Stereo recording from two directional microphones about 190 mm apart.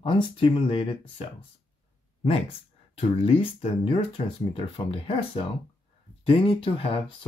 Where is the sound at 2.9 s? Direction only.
30° left (ahead or behind).